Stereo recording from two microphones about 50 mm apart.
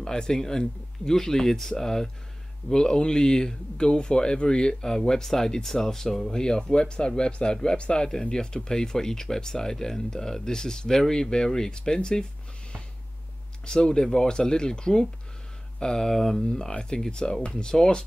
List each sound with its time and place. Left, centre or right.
0.0 s speech: centre
13.7 s speech: centre